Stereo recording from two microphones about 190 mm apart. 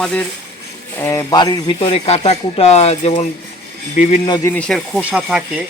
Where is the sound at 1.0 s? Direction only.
15° left (ahead or behind); by 4.2 s 35° left (ahead or behind).